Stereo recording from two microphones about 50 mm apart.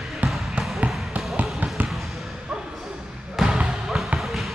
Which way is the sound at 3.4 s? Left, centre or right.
Centre.